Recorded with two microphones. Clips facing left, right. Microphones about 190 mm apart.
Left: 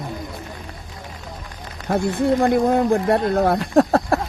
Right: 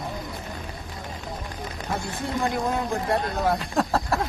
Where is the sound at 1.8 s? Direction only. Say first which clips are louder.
Left 12 dB; 60° left (ahead or behind).